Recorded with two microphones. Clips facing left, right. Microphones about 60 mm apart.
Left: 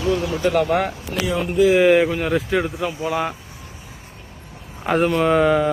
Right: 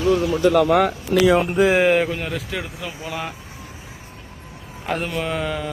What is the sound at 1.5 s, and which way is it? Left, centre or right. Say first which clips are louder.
Speech: left 1 dB; right.